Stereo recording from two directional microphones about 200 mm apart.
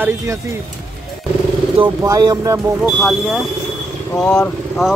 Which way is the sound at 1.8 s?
20° right (ahead or behind).